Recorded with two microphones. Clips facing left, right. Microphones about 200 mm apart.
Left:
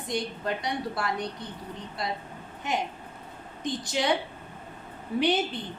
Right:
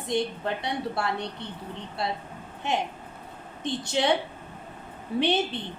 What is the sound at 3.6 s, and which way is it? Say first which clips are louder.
Speech: right 2 dB; 25° right (ahead or behind).